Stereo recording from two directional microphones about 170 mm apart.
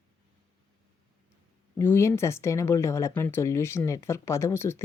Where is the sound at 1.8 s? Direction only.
15° left (ahead or behind).